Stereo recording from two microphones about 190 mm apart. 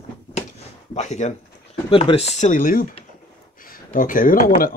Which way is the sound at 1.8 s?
30° left (ahead or behind).